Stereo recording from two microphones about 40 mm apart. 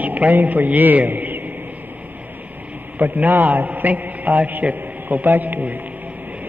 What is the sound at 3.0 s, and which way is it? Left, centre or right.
A man's voice, right.